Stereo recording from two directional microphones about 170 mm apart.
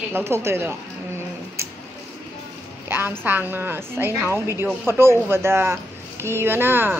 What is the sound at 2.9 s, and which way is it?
Speech, 10° right (ahead or behind).